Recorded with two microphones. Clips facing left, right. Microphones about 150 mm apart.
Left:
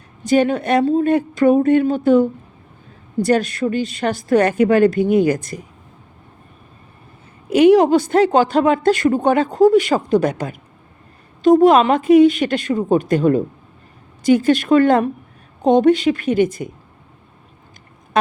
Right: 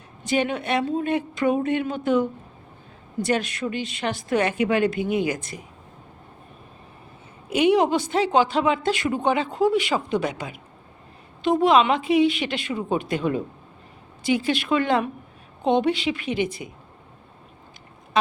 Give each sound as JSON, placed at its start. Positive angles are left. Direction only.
{"t": 0.3, "sound": "a woman's voice", "side_deg": 40}
{"t": 7.5, "sound": "speech", "side_deg": 40}